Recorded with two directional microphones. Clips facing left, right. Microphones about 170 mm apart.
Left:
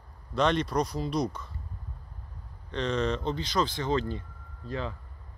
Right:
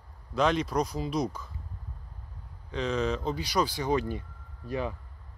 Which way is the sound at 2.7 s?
5° right (ahead or behind).